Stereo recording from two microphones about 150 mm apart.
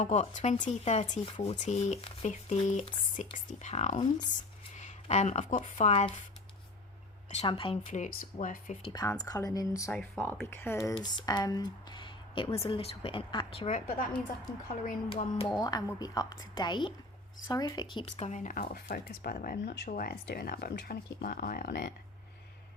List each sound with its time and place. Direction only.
0.0 s speech: 50° left (ahead or behind)
7.4 s a woman's voice: 40° left (ahead or behind)
7.9 s speech: 55° left (ahead or behind)
8.9 s a woman's voice: 25° left (ahead or behind)
10.9 s speech: 30° left (ahead or behind)
13.7 s speech: 65° left (ahead or behind)
15.1 s a woman's voice: 40° left (ahead or behind)
15.6 s a woman's voice: 25° left (ahead or behind)
18.0 s speech: 50° left (ahead or behind); by 21.9 s 80° left